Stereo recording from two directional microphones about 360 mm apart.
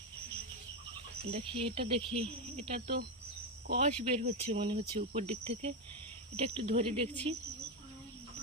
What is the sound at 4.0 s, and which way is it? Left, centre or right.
Speech, centre.